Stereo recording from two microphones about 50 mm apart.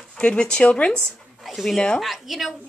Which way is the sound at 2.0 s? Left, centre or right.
Centre.